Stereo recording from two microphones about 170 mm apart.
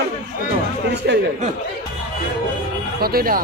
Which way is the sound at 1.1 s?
80° right.